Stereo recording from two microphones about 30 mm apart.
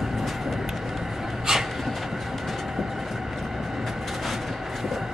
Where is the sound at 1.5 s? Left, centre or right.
Centre.